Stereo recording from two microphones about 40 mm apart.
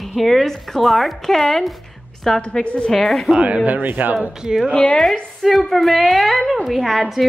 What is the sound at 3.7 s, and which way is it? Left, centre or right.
Speech, right.